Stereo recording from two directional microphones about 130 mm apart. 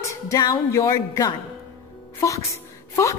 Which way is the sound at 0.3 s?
25° left (ahead or behind).